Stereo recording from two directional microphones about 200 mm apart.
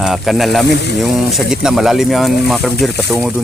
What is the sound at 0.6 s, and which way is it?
Speech, 60° left (ahead or behind).